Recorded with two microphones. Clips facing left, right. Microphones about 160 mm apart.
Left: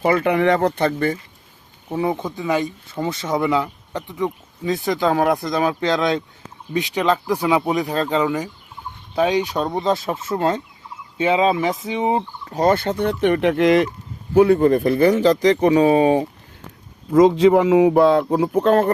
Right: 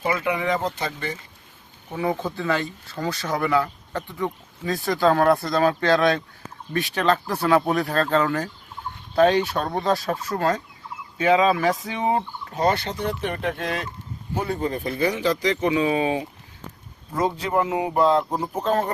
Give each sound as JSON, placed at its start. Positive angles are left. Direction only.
{"t": 0.0, "sound": "speech", "side_deg": 60}
{"t": 2.0, "sound": "speech", "side_deg": 20}
{"t": 12.5, "sound": "speech", "side_deg": 50}
{"t": 14.3, "sound": "speech", "side_deg": 65}
{"t": 17.2, "sound": "speech", "side_deg": 90}